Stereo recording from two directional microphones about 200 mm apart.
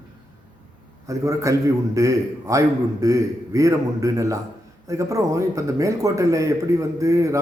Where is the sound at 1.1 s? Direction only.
15° right (ahead or behind).